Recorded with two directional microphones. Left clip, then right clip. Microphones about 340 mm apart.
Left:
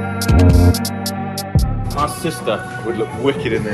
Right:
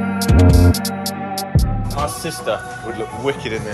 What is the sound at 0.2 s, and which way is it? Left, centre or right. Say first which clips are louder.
Music: even; centre.